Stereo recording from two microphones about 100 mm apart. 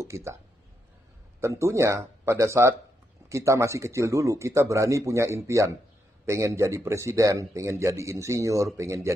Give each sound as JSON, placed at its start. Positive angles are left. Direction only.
{"t": 0.0, "sound": "speech", "side_deg": -30}
{"t": 1.4, "sound": "speech", "side_deg": -30}